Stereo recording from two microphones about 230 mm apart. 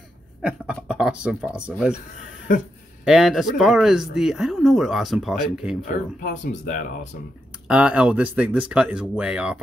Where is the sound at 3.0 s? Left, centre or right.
Centre.